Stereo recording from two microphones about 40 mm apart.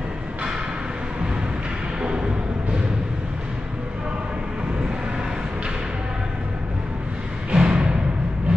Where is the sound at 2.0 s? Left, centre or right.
Right.